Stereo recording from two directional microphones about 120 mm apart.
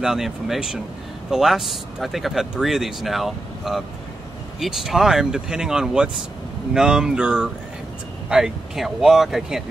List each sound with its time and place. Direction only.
0.0 s speech: 5° right (ahead or behind)